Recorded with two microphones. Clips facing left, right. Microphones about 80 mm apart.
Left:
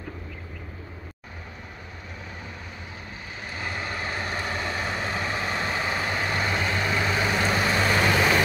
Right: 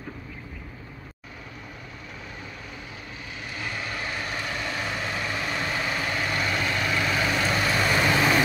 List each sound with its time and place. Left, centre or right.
3.5 s vehicle: left; by 8.4 s centre